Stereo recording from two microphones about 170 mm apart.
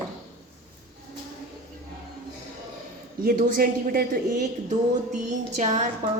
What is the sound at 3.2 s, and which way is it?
Speech, 55° right (ahead or behind).